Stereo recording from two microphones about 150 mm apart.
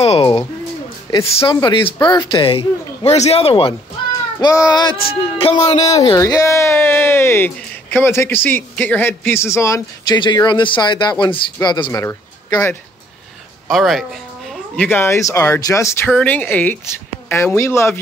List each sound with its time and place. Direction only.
0.0 s speech: 40° left (ahead or behind)
4.4 s speech: 25° left (ahead or behind)
5.4 s speech: 40° left (ahead or behind)
5.9 s speech: 25° left (ahead or behind)
13.7 s speech: centre (ahead or behind)
14.8 s speech: 15° left (ahead or behind)
16.1 s speech: 5° left (ahead or behind)